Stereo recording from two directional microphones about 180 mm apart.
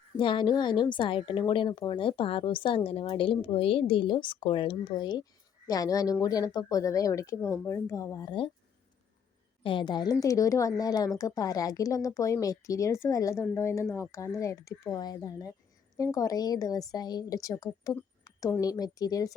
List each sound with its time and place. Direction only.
0.2 s a woman's voice: 25° left (ahead or behind)
9.6 s a woman's voice: 25° left (ahead or behind)
17.9 s a sound: 20° left (ahead or behind)
18.6 s a woman's voice: 20° left (ahead or behind)